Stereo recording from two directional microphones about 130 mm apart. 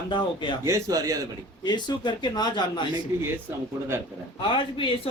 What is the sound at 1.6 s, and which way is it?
Speech, 35° left (ahead or behind).